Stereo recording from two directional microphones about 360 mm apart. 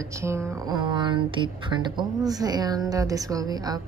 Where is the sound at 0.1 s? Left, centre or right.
Centre.